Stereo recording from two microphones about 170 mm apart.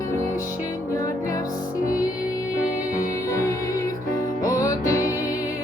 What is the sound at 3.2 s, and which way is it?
Music, 20° left (ahead or behind).